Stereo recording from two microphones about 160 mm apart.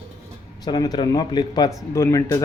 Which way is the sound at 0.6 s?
25° left (ahead or behind).